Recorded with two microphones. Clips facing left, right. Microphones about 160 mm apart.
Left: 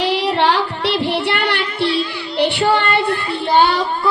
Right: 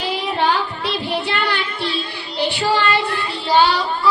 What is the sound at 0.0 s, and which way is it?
Music, 80° left.